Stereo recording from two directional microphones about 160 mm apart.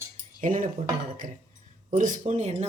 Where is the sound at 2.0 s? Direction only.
50° right (ahead or behind).